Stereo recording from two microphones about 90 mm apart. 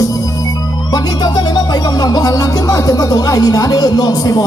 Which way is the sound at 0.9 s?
50° left (ahead or behind).